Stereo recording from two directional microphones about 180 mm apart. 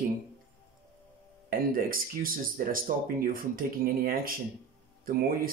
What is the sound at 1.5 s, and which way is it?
Speech, 50° right (ahead or behind).